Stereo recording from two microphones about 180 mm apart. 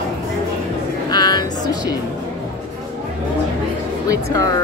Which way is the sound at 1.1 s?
25° left (ahead or behind).